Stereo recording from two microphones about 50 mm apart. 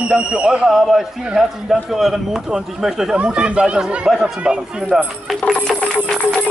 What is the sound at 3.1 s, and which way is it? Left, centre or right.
Speech, right.